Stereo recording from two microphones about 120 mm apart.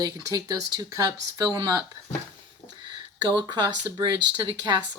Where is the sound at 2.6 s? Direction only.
50° left (ahead or behind).